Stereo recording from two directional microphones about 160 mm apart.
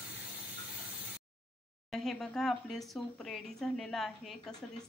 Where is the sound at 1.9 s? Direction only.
Centre (ahead or behind).